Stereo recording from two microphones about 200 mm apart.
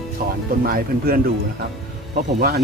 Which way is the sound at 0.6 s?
45° right (ahead or behind).